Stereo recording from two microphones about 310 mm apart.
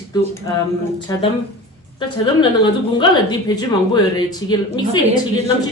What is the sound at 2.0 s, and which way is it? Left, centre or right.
A woman's voice, centre.